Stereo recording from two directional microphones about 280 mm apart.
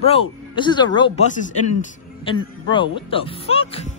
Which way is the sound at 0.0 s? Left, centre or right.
Centre.